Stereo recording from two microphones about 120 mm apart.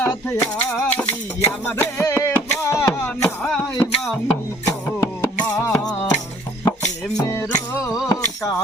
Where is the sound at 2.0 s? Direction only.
25° left (ahead or behind).